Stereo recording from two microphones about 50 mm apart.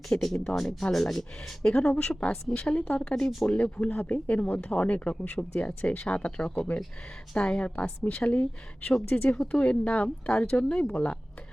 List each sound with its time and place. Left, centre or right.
0.1 s speech: left
0.5 s speech: centre
1.9 s speech: left
3.6 s speech: left